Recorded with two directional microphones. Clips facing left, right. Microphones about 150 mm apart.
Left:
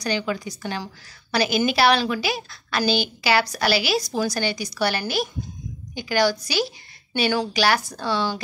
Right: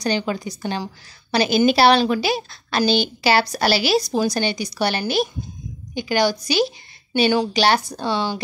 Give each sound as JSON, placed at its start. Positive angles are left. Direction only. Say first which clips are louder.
{"t": 0.0, "sound": "a woman's voice", "louder": "right 3 dB", "side_deg": -30}